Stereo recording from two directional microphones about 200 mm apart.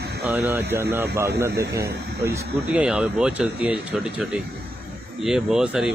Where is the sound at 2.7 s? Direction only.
5° right (ahead or behind).